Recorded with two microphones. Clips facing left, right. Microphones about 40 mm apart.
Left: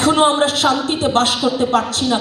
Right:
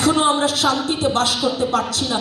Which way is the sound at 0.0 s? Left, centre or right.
Left.